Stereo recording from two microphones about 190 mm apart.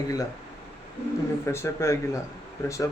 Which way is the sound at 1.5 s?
15° left (ahead or behind).